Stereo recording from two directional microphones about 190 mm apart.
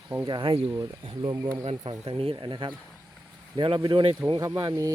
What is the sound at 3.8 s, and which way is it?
Speech, 25° right (ahead or behind).